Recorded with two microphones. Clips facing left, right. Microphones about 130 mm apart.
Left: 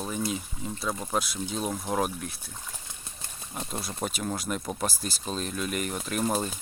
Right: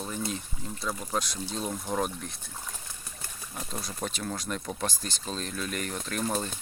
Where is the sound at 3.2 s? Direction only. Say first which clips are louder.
Left 3 dB; 25° left (ahead or behind).